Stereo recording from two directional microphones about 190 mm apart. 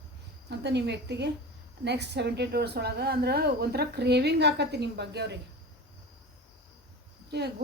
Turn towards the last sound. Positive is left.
turn(degrees=-60)  # may be behind; listen again after turning